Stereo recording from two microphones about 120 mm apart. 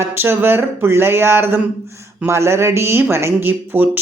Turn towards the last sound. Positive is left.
turn(degrees=-15)  # may be behind; listen again after turning